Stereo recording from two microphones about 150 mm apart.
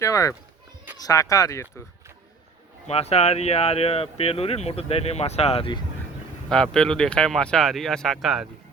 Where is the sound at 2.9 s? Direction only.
45° left (ahead or behind).